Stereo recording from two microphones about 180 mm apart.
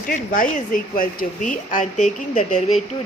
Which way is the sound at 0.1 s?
45° left (ahead or behind).